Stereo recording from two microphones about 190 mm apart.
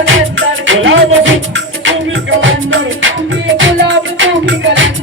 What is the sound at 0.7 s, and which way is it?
Music, 85° right.